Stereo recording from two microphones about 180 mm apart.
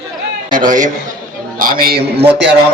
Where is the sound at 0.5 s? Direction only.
45° right (ahead or behind).